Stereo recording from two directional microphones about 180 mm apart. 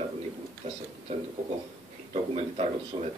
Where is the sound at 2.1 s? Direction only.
35° right (ahead or behind).